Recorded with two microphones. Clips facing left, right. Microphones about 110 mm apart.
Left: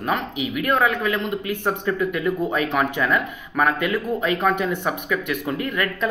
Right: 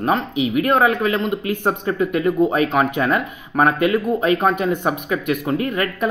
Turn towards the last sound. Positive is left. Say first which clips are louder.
# right 3 dB
turn(degrees=-25)  # may be behind; listen again after turning